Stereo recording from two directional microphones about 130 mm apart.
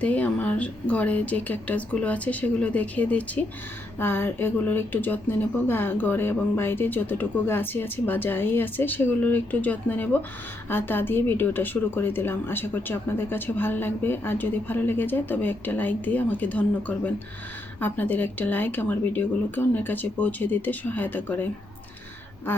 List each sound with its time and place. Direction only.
0.0 s speech: 10° left (ahead or behind)
22.5 s speech: 15° left (ahead or behind)